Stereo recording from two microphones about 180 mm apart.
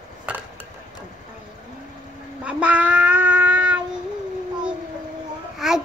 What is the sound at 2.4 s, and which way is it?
Child singing, 5° right (ahead or behind).